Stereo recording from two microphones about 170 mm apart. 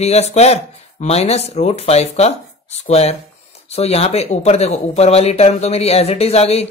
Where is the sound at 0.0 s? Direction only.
40° left (ahead or behind).